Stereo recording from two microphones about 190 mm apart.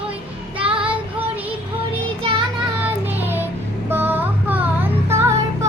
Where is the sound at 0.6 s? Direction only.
30° right (ahead or behind).